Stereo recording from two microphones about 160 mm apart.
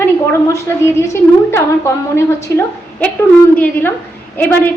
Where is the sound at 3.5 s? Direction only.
10° left (ahead or behind).